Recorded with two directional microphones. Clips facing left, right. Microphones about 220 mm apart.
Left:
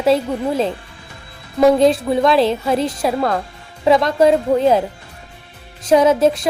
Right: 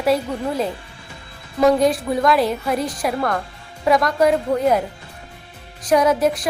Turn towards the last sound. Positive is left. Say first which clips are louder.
# left 4 dB
turn(degrees=25)  # may be behind; listen again after turning